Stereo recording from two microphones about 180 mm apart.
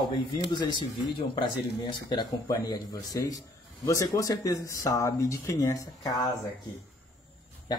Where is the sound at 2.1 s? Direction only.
25° left (ahead or behind).